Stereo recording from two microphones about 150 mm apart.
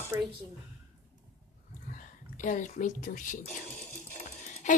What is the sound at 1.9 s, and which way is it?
Speech, 55° left (ahead or behind).